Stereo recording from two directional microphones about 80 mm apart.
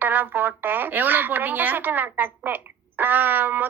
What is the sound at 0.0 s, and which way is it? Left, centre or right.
A woman's voice, right.